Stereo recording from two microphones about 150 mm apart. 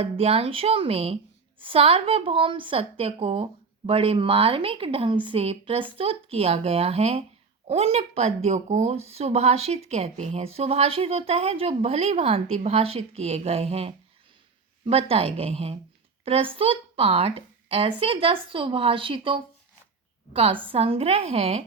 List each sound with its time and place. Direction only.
0.0 s a woman's voice: 40° right (ahead or behind)